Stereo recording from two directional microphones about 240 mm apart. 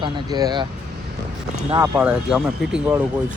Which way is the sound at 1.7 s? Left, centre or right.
Centre.